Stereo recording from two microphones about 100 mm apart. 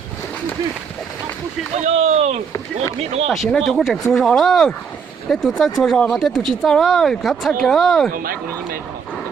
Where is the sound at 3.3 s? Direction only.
Centre (ahead or behind).